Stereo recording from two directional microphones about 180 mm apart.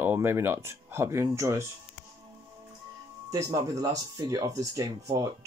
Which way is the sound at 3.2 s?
15° right (ahead or behind).